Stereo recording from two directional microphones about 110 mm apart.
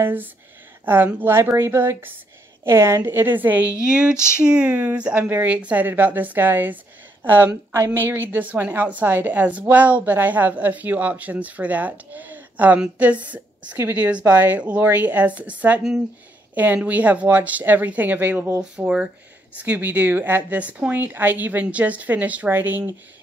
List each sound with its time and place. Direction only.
0.0 s a woman's voice: 15° right (ahead or behind)